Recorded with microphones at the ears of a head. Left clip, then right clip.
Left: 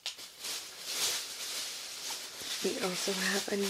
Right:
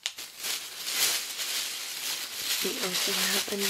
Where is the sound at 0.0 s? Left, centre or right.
Right.